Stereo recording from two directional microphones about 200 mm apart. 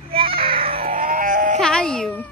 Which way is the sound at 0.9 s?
40° right (ahead or behind).